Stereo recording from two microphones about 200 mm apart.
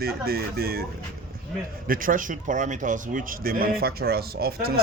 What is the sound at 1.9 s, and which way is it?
Speech, 45° right (ahead or behind).